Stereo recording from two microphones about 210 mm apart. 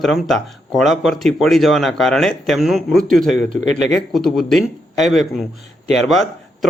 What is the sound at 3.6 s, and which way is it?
Speech, 35° right (ahead or behind).